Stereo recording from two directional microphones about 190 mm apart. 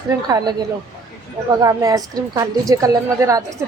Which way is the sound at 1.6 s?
20° right (ahead or behind).